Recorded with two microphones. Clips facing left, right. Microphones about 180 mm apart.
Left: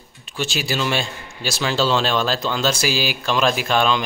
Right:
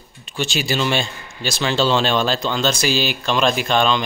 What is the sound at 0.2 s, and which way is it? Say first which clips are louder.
Speech: right 2 dB; 5° left (ahead or behind).